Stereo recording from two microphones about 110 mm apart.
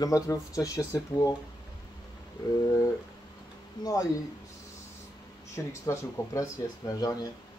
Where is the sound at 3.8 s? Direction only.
40° left (ahead or behind).